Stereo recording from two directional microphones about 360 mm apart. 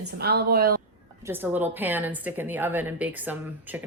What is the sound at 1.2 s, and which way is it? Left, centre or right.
A woman's voice, centre.